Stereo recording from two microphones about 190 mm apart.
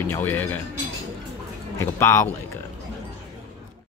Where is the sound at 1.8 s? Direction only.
15° left (ahead or behind).